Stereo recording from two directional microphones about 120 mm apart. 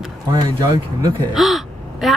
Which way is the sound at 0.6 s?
30° right (ahead or behind).